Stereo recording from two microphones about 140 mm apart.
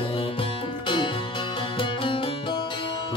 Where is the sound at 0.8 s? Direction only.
35° left (ahead or behind).